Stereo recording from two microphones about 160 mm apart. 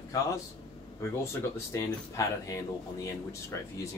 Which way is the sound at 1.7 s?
20° left (ahead or behind).